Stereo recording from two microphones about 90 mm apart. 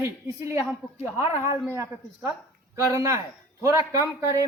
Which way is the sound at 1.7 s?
30° right (ahead or behind).